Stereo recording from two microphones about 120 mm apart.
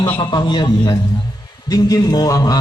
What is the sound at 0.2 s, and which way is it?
A man's voice, 40° left (ahead or behind).